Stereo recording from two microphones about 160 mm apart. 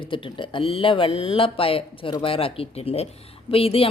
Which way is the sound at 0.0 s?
30° left (ahead or behind).